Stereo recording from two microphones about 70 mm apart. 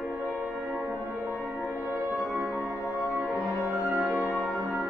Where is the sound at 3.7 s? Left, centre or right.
Right.